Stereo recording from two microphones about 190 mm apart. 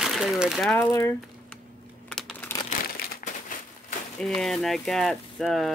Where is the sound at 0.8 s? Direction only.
15° left (ahead or behind).